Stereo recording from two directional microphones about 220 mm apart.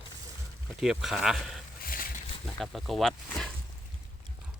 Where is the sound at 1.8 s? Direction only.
40° left (ahead or behind).